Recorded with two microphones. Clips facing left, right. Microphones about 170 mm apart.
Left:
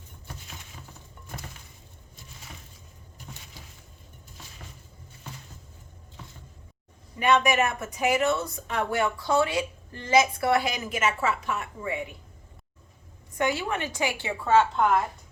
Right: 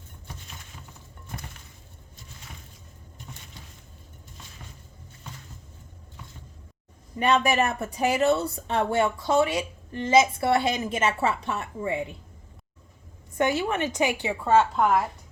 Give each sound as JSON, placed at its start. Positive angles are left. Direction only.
{"t": 7.2, "sound": "speech", "side_deg": -35}
{"t": 13.3, "sound": "speech", "side_deg": -25}